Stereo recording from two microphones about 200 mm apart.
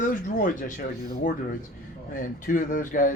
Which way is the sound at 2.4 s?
40° left (ahead or behind).